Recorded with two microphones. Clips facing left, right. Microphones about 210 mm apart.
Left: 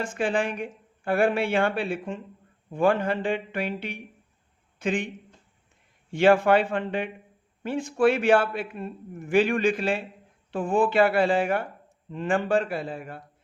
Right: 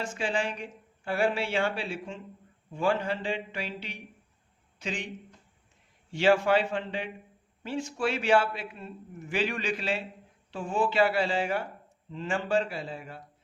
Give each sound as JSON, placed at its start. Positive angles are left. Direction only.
{"t": 0.0, "sound": "speech", "side_deg": 55}
{"t": 6.1, "sound": "a man's voice", "side_deg": 55}